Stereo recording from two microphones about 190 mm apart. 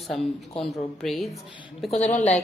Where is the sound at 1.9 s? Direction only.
40° left (ahead or behind).